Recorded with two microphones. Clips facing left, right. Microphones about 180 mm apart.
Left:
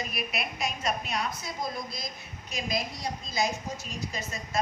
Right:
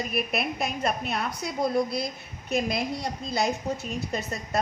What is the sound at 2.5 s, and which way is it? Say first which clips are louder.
A woman's voice: right 6 dB; 60° right (ahead or behind).